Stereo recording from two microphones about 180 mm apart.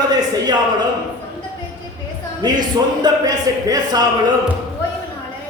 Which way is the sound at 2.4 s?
25° right (ahead or behind).